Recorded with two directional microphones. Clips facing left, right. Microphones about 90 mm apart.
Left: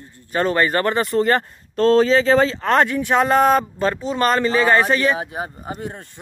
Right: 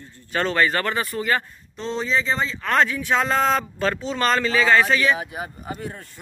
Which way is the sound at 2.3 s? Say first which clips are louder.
Left 5 dB; 50° left (ahead or behind).